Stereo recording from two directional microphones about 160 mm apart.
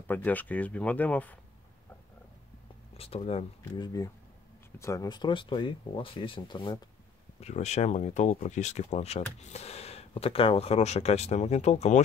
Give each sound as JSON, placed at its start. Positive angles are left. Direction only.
{"t": 0.0, "sound": "speech", "side_deg": 10}
{"t": 3.0, "sound": "speech", "side_deg": 35}
{"t": 7.3, "sound": "speech", "side_deg": 45}